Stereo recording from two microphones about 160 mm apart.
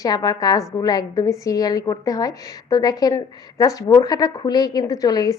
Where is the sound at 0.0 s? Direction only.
25° left (ahead or behind).